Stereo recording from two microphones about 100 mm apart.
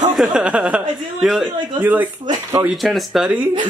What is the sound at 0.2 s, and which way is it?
Speech, 10° right (ahead or behind).